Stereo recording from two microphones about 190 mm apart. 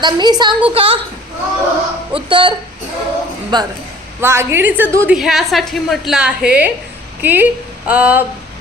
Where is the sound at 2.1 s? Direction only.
25° right (ahead or behind).